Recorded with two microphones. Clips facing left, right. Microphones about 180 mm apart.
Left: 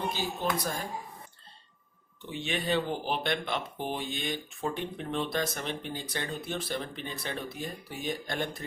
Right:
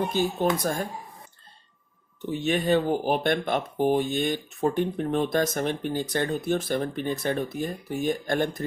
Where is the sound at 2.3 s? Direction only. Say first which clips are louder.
Right 7 dB; 45° right (ahead or behind).